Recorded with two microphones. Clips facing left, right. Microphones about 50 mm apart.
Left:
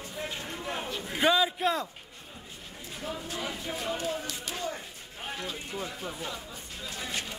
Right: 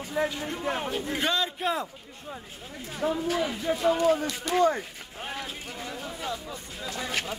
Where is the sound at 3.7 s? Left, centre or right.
Right.